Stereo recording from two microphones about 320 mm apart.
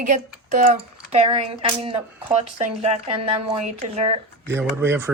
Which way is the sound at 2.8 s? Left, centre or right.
Centre.